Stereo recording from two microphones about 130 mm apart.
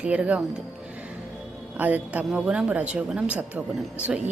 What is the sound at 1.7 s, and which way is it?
A woman's voice, 10° right (ahead or behind).